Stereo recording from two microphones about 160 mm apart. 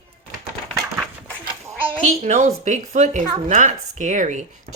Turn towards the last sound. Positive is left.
turn(degrees=-50)  # may be behind; listen again after turning